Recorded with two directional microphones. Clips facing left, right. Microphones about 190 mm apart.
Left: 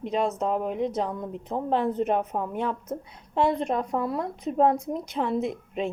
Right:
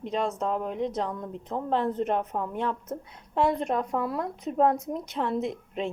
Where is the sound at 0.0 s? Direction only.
5° left (ahead or behind).